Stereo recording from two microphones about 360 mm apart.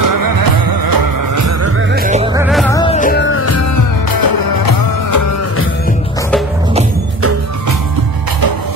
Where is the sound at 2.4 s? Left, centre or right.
Centre.